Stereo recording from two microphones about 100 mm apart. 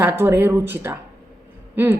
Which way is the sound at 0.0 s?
20° right (ahead or behind).